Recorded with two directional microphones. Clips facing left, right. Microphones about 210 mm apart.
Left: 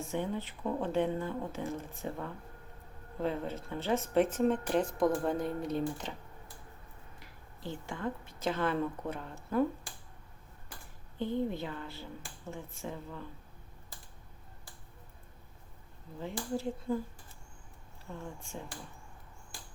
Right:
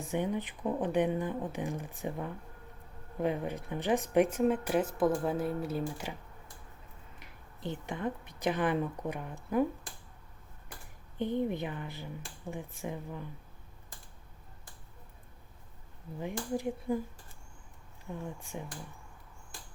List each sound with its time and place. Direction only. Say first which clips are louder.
0.1 s speech: right 4 dB; 15° right (ahead or behind)
7.2 s speech: right 5 dB; 20° right (ahead or behind)
11.2 s speech: right 2 dB; 20° right (ahead or behind)
16.2 s speech: right 1 dB; 15° right (ahead or behind)
18.0 s speech: right 3 dB; 15° right (ahead or behind)